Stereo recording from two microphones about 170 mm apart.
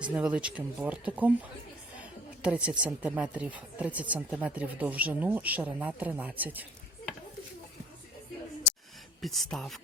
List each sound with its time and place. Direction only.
0.0 s speech: 5° right (ahead or behind)
9.2 s speech: centre (ahead or behind)